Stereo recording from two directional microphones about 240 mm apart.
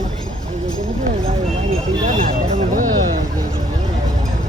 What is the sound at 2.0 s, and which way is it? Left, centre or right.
Speech, right.